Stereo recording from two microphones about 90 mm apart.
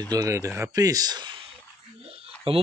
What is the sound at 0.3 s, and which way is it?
Speech, 30° right (ahead or behind).